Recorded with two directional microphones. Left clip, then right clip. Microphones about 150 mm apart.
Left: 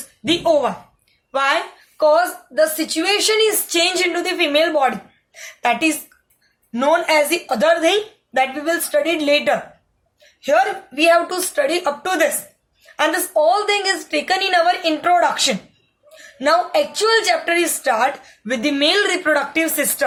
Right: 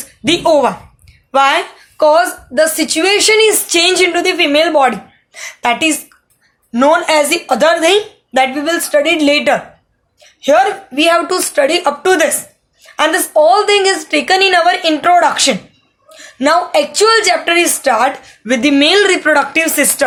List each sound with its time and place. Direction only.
0.3 s a woman's voice: 40° right (ahead or behind)